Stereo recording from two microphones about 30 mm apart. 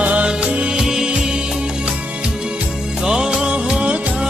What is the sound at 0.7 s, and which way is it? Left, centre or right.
Music, centre.